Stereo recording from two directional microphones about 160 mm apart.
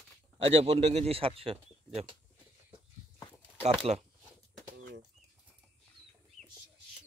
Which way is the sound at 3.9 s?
35° right (ahead or behind).